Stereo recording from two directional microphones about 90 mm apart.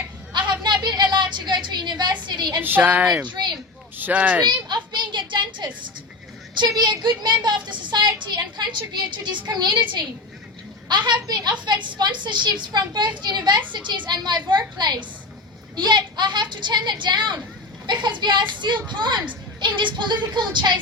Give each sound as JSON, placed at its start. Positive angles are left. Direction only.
{"t": 0.6, "sound": "a sound", "side_deg": -55}
{"t": 2.2, "sound": "a woman's voice", "side_deg": -50}
{"t": 2.6, "sound": "a woman's voice", "side_deg": -20}
{"t": 3.2, "sound": "speech", "side_deg": -55}
{"t": 3.9, "sound": "a child's voice", "side_deg": -20}
{"t": 4.7, "sound": "a sound", "side_deg": -55}
{"t": 6.6, "sound": "speech", "side_deg": -50}